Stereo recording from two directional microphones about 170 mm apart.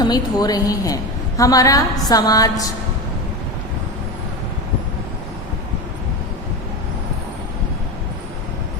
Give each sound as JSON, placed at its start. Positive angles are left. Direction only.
{"t": 0.0, "sound": "a woman's voice", "side_deg": 25}